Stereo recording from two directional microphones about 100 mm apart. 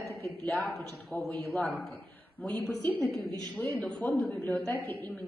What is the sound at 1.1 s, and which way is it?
A woman's voice, 15° left (ahead or behind).